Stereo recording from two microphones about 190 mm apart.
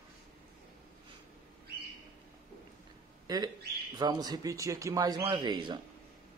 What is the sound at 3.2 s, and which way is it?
A man's voice, 20° right (ahead or behind).